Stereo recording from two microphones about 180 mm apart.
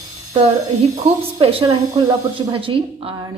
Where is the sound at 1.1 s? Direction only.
30° right (ahead or behind).